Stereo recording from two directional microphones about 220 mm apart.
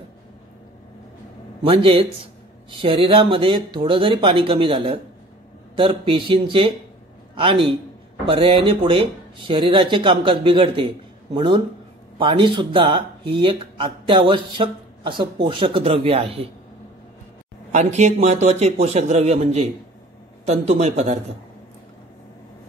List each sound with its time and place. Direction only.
1.6 s a man's voice: 25° right (ahead or behind)
17.7 s a man's voice: 30° right (ahead or behind)